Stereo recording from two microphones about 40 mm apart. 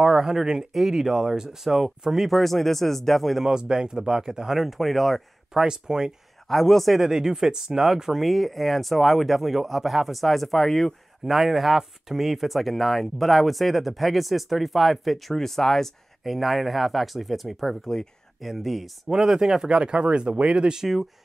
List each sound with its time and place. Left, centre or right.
0.0 s speech: centre
3.4 s speech: centre
4.6 s speech: centre
5.6 s speech: centre
6.4 s speech: centre
7.0 s speech: centre
19.0 s speech: centre
19.7 s speech: right